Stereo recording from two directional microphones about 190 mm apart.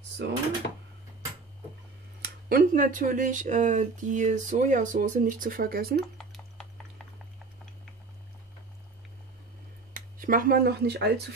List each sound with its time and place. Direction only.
0.2 s speech: 65° right (ahead or behind)
2.2 s speech: 50° right (ahead or behind)
5.9 s a sound: centre (ahead or behind)
9.9 s speech: 45° right (ahead or behind)